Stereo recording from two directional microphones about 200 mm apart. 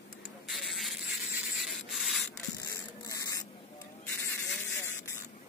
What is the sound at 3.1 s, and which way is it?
Spray, 15° left (ahead or behind).